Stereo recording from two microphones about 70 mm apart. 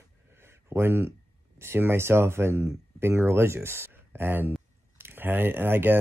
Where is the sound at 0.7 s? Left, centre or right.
Right.